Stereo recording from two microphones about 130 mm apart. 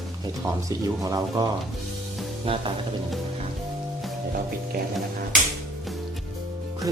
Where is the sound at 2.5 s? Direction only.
45° right (ahead or behind).